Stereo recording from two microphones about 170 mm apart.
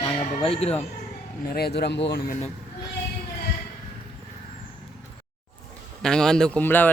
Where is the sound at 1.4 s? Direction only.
65° left (ahead or behind); by 2.2 s 90° left.